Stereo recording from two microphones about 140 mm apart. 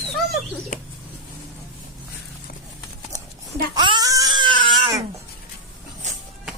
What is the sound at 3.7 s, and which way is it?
Crying, 30° right (ahead or behind).